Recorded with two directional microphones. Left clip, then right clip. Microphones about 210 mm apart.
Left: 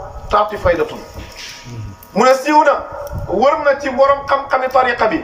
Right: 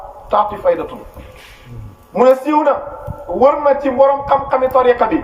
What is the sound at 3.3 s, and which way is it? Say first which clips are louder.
A man's voice: right 1 dB; 20° right (ahead or behind).